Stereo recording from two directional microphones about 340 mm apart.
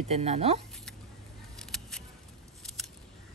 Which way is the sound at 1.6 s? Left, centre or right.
Centre.